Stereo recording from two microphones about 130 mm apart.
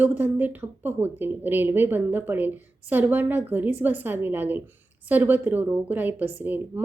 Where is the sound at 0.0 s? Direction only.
15° right (ahead or behind).